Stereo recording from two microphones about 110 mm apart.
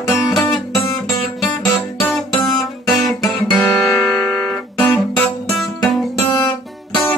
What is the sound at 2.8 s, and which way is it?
Guitar, centre (ahead or behind).